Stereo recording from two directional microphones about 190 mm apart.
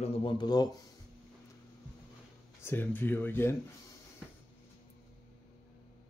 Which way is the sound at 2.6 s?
10° left (ahead or behind).